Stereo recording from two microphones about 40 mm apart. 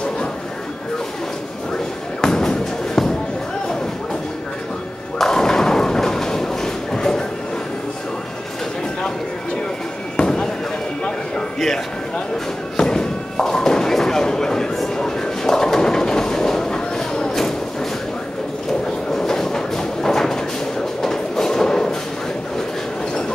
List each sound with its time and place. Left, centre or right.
2.2 s music: centre
3.0 s a sound: centre
5.2 s thump: centre
10.1 s fireworks: centre
11.1 s a sound: centre
12.7 s thump: centre
15.0 s bird: centre
19.1 s train: centre